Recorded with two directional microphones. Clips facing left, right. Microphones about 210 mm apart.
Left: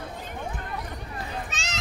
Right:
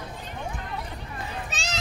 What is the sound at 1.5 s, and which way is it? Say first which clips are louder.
Children playing: right 2 dB; 35° right (ahead or behind).